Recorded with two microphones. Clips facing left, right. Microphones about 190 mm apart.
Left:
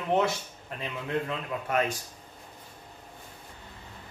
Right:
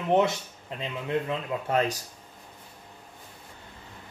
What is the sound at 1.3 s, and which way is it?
Speech, 30° right (ahead or behind).